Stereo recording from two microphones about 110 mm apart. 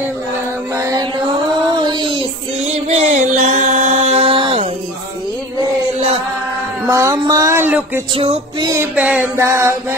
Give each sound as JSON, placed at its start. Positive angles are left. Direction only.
{"t": 0.7, "sound": "mantra", "side_deg": -30}
{"t": 1.7, "sound": "child singing", "side_deg": -45}
{"t": 2.7, "sound": "music", "side_deg": -75}
{"t": 6.9, "sound": "a sound", "side_deg": -30}
{"t": 7.6, "sound": "a sound", "side_deg": -15}
{"t": 8.1, "sound": "music", "side_deg": -60}
{"t": 8.5, "sound": "music", "side_deg": -30}
{"t": 8.9, "sound": "music", "side_deg": -15}
{"t": 9.4, "sound": "a sound", "side_deg": -25}